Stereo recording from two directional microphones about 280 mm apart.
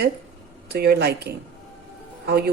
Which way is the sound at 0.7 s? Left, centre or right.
Right.